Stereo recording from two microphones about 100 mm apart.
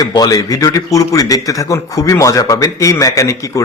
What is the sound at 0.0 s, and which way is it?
A man's voice, 40° left (ahead or behind).